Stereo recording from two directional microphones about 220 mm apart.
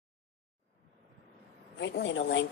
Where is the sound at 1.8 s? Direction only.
55° left (ahead or behind).